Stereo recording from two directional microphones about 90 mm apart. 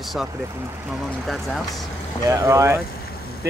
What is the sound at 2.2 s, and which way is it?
Speech, 35° right (ahead or behind).